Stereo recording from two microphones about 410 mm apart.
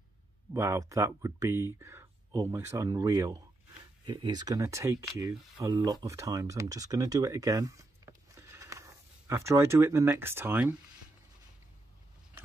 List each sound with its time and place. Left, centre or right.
0.5 s speech: centre